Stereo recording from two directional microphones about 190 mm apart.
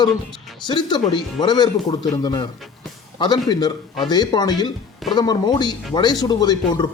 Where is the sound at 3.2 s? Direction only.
20° left (ahead or behind).